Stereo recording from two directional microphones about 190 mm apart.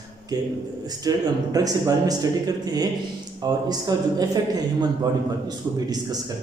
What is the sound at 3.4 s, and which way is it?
A man's voice, 20° right (ahead or behind).